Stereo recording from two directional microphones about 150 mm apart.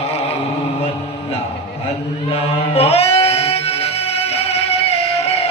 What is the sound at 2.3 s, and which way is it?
Music, 40° left (ahead or behind).